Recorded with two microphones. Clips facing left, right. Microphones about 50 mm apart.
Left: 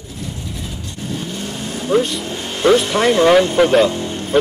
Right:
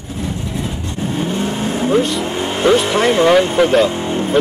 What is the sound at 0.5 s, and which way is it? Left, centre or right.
Vehicle, right.